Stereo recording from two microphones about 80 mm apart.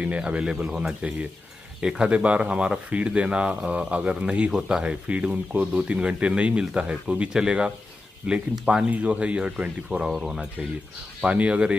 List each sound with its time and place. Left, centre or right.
0.0 s speech: centre
11.2 s speech: centre